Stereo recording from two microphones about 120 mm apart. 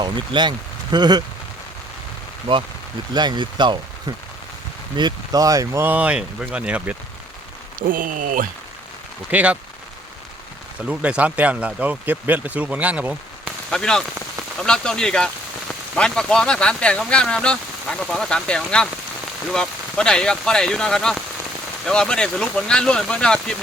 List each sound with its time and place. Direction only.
0.0 s speech: 40° right (ahead or behind)
2.5 s speech: 45° right (ahead or behind)
4.9 s speech: 35° right (ahead or behind)
5.8 s speech: 10° right (ahead or behind)
7.8 s speech: 90° right
9.3 s speech: 10° right (ahead or behind)
10.8 s speech: 10° right (ahead or behind)
13.7 s speech: 5° left (ahead or behind)